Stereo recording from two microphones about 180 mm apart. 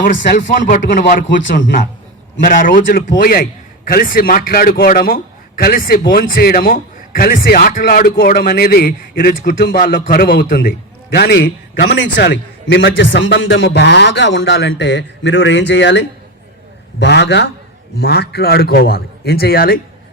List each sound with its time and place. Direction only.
0.3 s a man's voice: 45° left (ahead or behind); by 17.5 s 70° left (ahead or behind)
17.9 s a man's voice: 60° left (ahead or behind)